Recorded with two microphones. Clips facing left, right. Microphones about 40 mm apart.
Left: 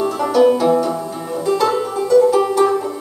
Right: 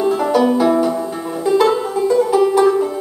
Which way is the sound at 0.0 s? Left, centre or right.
Centre.